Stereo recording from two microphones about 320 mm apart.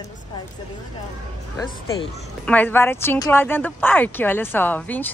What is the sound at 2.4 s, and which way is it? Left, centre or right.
Speech, centre.